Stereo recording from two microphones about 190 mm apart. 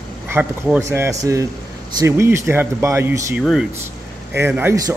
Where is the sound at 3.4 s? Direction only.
Centre (ahead or behind).